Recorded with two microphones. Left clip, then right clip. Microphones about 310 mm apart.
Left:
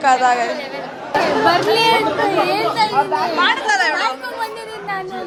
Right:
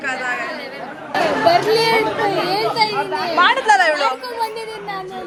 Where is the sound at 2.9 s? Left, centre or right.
Left.